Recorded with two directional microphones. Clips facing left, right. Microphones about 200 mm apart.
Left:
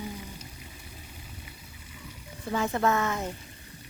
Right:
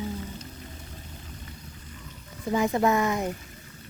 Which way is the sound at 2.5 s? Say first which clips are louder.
Right 3 dB; 15° right (ahead or behind).